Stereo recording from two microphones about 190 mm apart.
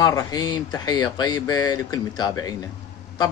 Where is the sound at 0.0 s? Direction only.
20° left (ahead or behind).